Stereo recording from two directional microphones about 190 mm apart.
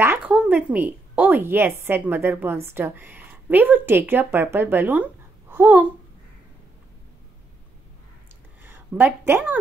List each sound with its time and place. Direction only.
0.0 s a woman's voice: 10° right (ahead or behind)
8.6 s speech: 10° right (ahead or behind)